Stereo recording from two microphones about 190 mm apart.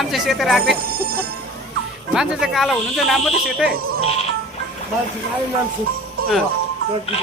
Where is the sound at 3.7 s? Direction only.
55° right (ahead or behind).